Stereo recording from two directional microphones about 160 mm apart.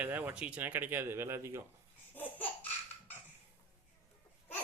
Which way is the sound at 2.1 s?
10° left (ahead or behind).